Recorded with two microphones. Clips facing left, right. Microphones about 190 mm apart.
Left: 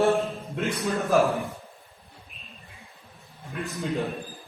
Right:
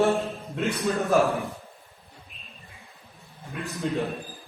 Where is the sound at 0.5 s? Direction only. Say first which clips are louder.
Right 2 dB; centre (ahead or behind).